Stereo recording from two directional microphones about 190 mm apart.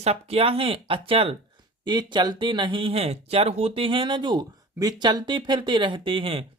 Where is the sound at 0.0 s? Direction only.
30° right (ahead or behind).